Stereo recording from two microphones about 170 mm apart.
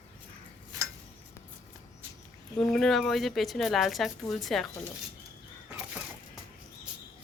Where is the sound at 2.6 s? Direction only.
Centre (ahead or behind).